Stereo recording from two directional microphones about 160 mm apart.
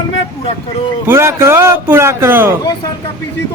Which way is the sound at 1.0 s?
15° right (ahead or behind).